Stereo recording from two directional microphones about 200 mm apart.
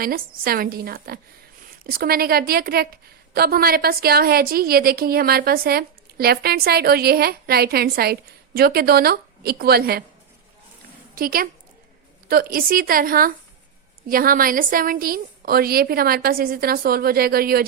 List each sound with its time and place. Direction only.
0.0 s a woman's voice: 45° right (ahead or behind)
11.1 s a woman's voice: 45° right (ahead or behind)